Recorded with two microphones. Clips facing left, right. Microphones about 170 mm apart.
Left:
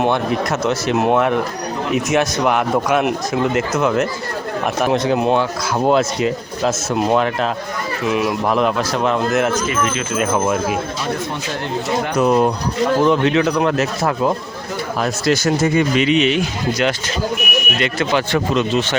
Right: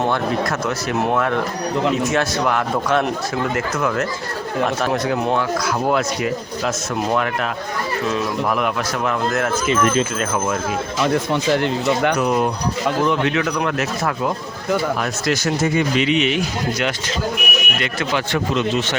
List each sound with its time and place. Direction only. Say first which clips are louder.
0.6 s speech: left 4 dB; 25° left (ahead or behind)
8.0 s speech: left 4 dB; 15° left (ahead or behind)
8.5 s speech: left 4 dB; 30° left (ahead or behind)
12.2 s speech: left 4 dB; 35° left (ahead or behind)
16.0 s speech: left 3 dB; 35° left (ahead or behind)